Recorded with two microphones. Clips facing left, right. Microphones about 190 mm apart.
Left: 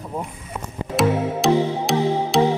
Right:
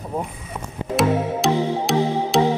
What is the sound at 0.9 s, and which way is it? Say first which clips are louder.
Music: even; centre (ahead or behind).